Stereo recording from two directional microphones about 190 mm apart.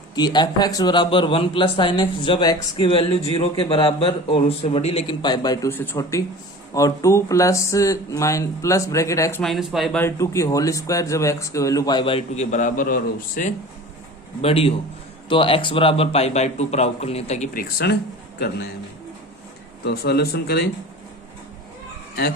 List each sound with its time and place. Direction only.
0.2 s a man's voice: 20° left (ahead or behind)
5.7 s speech: 10° left (ahead or behind)
9.4 s speech: centre (ahead or behind)
10.0 s speech: 15° left (ahead or behind); by 13.5 s 45° left (ahead or behind)
14.4 s a man's voice: 30° left (ahead or behind); by 18.7 s 55° left (ahead or behind)
19.8 s a man's voice: 55° left (ahead or behind)